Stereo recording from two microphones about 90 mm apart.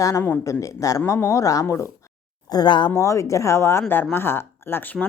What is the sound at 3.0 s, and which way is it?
Speech, 35° left (ahead or behind).